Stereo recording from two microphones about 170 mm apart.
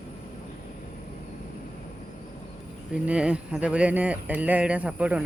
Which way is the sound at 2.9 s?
5° right (ahead or behind).